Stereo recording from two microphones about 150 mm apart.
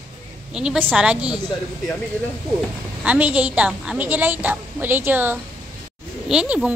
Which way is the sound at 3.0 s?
10° right (ahead or behind).